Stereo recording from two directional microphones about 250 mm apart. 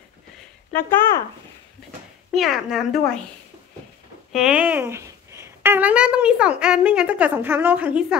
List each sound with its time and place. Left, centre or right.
0.7 s speech: centre
2.3 s speech: centre
4.3 s speech: centre